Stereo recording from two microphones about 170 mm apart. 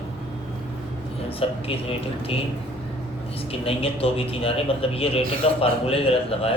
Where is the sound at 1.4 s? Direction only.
35° left (ahead or behind).